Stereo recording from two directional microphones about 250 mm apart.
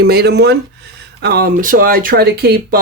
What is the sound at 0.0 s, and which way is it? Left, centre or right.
Speech, right.